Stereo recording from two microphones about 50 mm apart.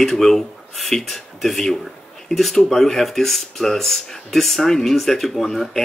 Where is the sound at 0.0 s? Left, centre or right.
Centre.